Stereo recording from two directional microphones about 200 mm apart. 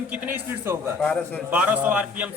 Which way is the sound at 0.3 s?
10° right (ahead or behind).